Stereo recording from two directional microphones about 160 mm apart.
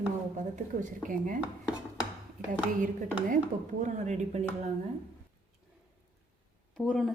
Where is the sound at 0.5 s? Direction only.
55° right (ahead or behind).